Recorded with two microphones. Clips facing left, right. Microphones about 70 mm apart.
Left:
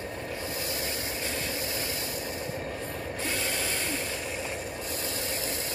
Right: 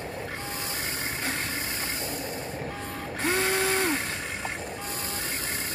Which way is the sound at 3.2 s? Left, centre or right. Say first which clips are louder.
Right 8 dB; right.